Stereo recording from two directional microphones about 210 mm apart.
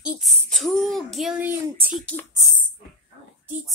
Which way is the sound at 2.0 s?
10° left (ahead or behind).